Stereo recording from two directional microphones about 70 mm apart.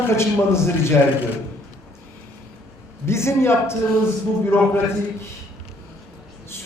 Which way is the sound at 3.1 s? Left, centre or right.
Left.